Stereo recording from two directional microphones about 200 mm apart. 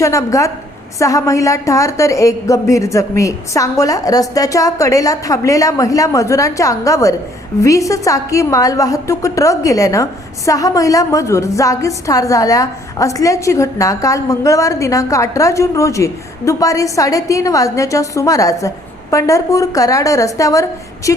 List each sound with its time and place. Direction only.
0.0 s a woman's voice: 15° left (ahead or behind)